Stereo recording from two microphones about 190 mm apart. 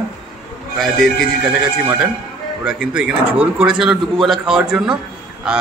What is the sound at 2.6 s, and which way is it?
A man's voice, 5° right (ahead or behind).